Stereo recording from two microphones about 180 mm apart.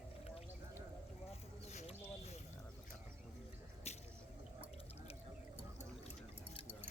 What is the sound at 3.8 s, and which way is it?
Drip, 35° left (ahead or behind).